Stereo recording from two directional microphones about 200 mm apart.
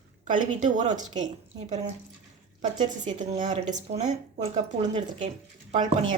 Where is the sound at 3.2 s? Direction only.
40° right (ahead or behind).